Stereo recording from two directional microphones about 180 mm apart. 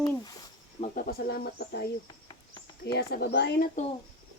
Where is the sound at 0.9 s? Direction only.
55° left (ahead or behind).